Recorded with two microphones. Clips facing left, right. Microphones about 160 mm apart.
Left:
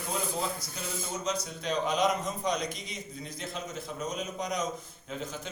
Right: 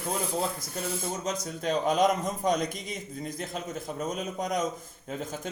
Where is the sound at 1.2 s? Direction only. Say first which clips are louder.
Right 2 dB; 45° right (ahead or behind).